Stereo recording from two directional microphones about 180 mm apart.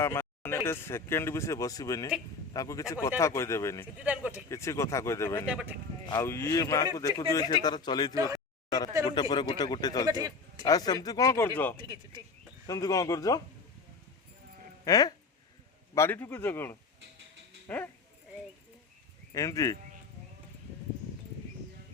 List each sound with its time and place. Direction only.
0.0 s speech: 15° left (ahead or behind)
4.0 s speech: 10° right (ahead or behind)
4.4 s speech: 15° left (ahead or behind)
5.5 s speech: 5° right (ahead or behind)
6.1 s speech: 15° left (ahead or behind)
8.1 s speech: 20° right (ahead or behind)
9.0 s speech: 25° left (ahead or behind)
10.1 s speech: 20° right (ahead or behind)
10.7 s speech: 20° left (ahead or behind)
14.8 s speech: 20° left (ahead or behind)
19.3 s speech: 20° left (ahead or behind)